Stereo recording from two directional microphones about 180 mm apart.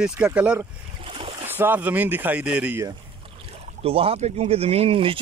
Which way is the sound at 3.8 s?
30° right (ahead or behind).